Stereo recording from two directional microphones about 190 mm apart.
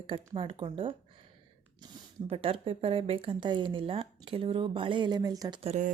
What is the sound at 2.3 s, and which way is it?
Speech, 30° right (ahead or behind).